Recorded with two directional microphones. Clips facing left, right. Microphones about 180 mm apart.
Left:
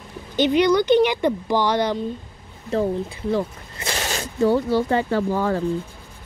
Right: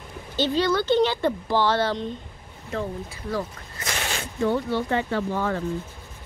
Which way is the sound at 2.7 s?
30° left (ahead or behind).